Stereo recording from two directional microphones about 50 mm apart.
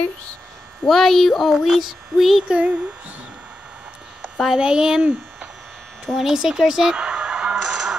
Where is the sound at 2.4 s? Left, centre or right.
Right.